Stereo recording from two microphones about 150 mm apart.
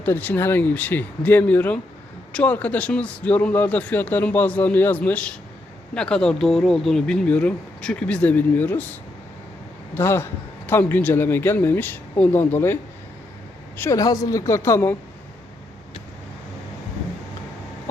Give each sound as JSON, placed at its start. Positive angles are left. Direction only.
{"t": 0.0, "sound": "a woman's voice", "side_deg": 15}